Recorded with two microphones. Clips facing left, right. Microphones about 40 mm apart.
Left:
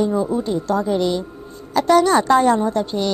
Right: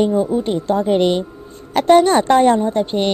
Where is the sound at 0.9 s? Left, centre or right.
Right.